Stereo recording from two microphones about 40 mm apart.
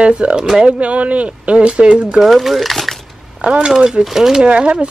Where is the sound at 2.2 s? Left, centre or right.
Centre.